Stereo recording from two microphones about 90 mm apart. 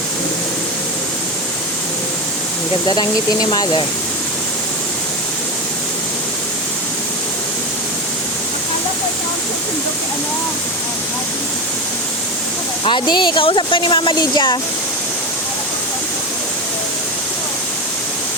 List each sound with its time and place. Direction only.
12.8 s speech: 60° left (ahead or behind)